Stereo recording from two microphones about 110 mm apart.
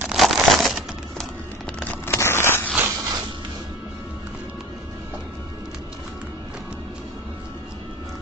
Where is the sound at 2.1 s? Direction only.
25° left (ahead or behind).